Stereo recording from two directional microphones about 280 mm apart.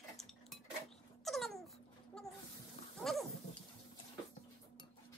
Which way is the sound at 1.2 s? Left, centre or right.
Centre.